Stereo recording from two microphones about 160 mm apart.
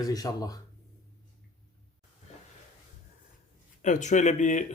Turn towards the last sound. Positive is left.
turn(degrees=50)  # may be behind; listen again after turning